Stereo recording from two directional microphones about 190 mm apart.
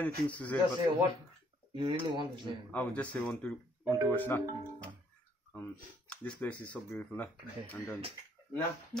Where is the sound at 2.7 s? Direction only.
10° left (ahead or behind).